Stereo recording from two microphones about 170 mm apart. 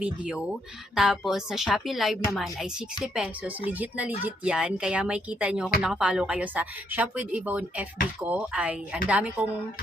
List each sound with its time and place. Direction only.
0.0 s a woman's voice: 5° right (ahead or behind)